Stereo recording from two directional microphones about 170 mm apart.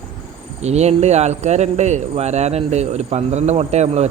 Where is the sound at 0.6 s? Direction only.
40° right (ahead or behind).